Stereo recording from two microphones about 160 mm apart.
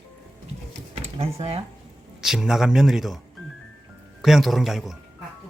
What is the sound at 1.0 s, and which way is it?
Speech, 40° right (ahead or behind).